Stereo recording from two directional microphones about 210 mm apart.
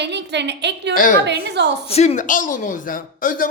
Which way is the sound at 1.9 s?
30° left (ahead or behind).